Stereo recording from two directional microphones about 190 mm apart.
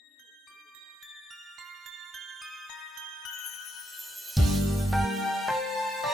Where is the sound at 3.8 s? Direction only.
Centre (ahead or behind).